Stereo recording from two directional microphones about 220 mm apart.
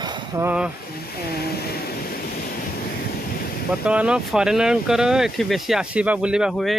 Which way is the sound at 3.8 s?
5° right (ahead or behind).